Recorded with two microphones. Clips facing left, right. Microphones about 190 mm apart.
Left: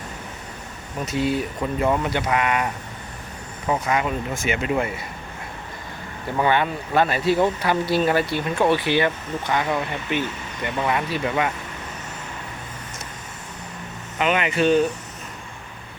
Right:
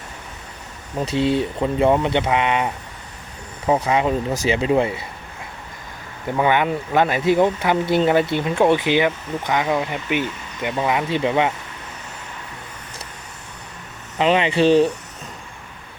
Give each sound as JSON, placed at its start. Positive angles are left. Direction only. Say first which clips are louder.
{"t": 0.9, "sound": "speech", "louder": "right 4 dB", "side_deg": -30}
{"t": 3.7, "sound": "speech", "louder": "right 4 dB", "side_deg": -30}
{"t": 6.3, "sound": "speech", "louder": "right 2 dB", "side_deg": -15}
{"t": 14.2, "sound": "speech", "louder": "right 4 dB", "side_deg": -30}